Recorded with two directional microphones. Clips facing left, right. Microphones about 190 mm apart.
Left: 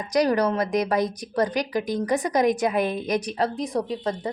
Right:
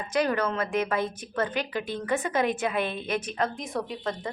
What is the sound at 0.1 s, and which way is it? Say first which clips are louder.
A woman's voice: left 5 dB; 35° left (ahead or behind).